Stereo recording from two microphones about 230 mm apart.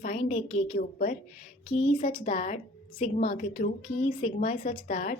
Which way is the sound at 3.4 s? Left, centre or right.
Left.